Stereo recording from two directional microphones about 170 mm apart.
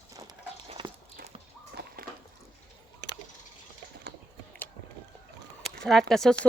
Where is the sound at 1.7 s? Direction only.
70° right (ahead or behind).